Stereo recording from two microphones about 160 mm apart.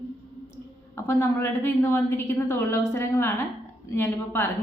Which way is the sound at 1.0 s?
15° left (ahead or behind).